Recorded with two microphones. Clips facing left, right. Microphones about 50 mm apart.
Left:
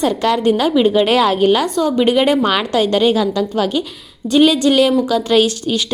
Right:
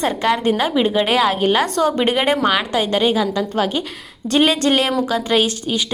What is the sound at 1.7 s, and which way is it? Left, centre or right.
Speech, right.